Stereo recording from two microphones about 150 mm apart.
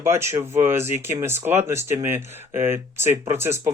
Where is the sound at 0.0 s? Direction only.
15° right (ahead or behind).